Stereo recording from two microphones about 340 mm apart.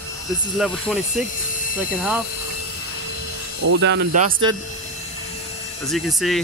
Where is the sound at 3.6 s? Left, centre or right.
Right.